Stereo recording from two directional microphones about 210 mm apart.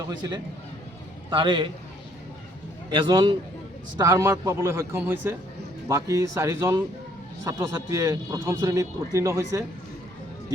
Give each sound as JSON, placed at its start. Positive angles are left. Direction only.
{"t": 0.2, "sound": "a man's voice", "side_deg": -20}
{"t": 2.9, "sound": "a man's voice", "side_deg": -20}